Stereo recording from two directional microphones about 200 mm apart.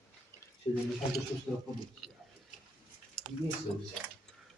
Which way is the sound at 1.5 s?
5° left (ahead or behind).